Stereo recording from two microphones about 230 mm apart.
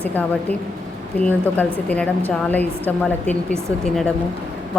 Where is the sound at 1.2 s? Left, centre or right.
Centre.